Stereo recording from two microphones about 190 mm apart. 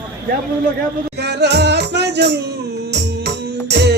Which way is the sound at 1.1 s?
60° right (ahead or behind).